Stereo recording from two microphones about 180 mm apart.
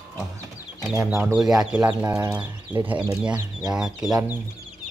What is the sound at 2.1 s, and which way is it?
Speech, 20° right (ahead or behind).